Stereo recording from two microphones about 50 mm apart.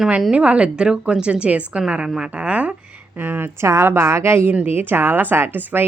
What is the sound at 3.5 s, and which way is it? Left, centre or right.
Speech, right.